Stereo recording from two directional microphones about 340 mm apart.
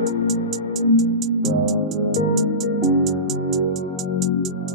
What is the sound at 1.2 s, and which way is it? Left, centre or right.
Music, centre.